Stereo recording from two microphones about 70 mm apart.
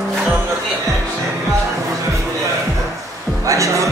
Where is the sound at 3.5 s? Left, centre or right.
Right.